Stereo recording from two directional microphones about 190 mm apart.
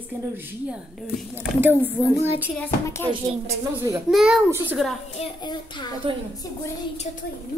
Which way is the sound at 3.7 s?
15° right (ahead or behind).